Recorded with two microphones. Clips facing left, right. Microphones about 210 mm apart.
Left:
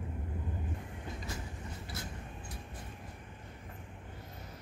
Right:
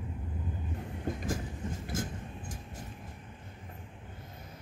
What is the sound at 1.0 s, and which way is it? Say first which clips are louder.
Train: right 8 dB; 50° right (ahead or behind).